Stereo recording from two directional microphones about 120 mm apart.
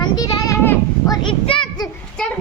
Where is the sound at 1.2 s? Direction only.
45° left (ahead or behind).